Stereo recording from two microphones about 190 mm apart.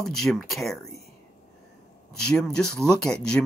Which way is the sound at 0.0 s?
Centre (ahead or behind).